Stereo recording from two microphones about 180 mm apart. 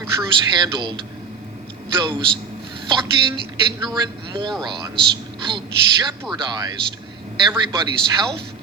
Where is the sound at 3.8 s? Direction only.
25° right (ahead or behind).